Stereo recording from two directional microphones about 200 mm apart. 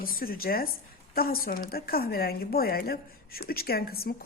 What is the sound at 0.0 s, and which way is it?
A woman's voice, 45° left (ahead or behind).